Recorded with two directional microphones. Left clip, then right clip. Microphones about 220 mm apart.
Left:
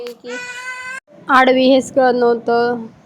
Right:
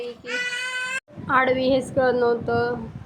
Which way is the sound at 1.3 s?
30° left (ahead or behind).